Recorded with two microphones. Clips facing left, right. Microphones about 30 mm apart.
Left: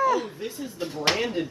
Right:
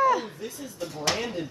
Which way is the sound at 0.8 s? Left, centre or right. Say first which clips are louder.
Left 2 dB; left.